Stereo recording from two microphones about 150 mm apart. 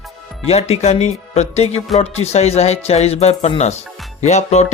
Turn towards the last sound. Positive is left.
turn(degrees=50)  # may be behind; listen again after turning